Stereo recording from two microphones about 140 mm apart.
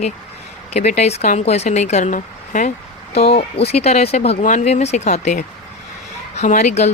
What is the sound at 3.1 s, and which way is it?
Speech, 50° left (ahead or behind).